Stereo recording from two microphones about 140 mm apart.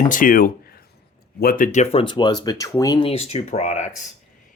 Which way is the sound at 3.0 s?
45° left (ahead or behind).